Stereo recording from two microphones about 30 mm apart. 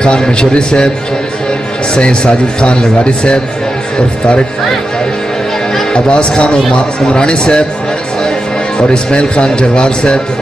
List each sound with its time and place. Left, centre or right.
0.0 s a man's voice: left
2.0 s a man's voice: left
5.9 s a man's voice: left
8.7 s a man's voice: left